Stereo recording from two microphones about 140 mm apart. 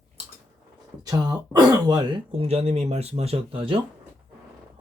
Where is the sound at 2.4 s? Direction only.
50° right (ahead or behind).